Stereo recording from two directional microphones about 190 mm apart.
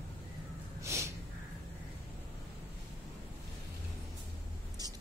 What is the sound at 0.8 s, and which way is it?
Snort, 15° right (ahead or behind).